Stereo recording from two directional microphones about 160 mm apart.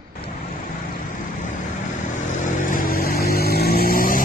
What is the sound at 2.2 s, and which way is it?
Vehicle, 50° left (ahead or behind).